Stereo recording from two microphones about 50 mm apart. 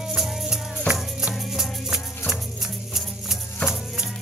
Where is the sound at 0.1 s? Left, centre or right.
Centre.